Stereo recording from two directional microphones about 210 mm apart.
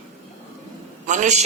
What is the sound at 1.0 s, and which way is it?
Speech, 35° right (ahead or behind).